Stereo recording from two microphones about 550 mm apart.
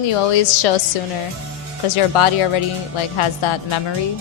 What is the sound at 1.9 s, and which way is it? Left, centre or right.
A woman's voice, left.